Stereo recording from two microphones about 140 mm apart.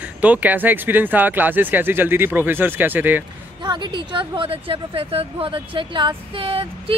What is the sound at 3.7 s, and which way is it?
Speech, 35° right (ahead or behind).